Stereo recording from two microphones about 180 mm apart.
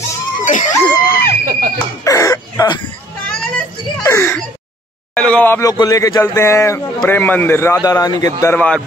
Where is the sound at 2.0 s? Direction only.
20° left (ahead or behind).